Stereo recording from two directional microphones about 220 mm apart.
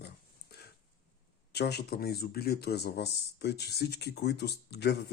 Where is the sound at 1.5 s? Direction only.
45° left (ahead or behind).